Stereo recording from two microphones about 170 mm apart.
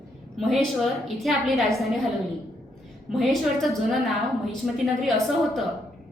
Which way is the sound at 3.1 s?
Centre (ahead or behind).